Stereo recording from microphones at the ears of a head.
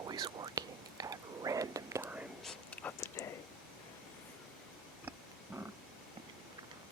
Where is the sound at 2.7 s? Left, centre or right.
Left.